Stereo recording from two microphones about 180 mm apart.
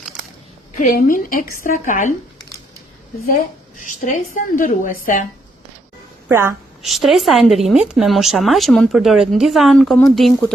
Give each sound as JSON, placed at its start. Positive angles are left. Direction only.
{"t": 0.8, "sound": "a woman's voice", "side_deg": 50}
{"t": 4.0, "sound": "a woman's voice", "side_deg": 50}
{"t": 6.2, "sound": "a woman's voice", "side_deg": -15}
{"t": 6.8, "sound": "speech", "side_deg": 0}